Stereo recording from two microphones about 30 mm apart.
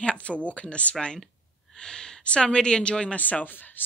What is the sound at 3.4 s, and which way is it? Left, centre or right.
Speech, left.